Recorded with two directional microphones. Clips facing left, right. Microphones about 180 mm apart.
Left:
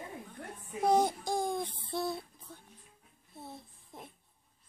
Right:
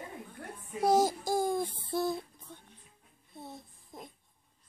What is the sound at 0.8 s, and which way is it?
Child singing, 5° right (ahead or behind).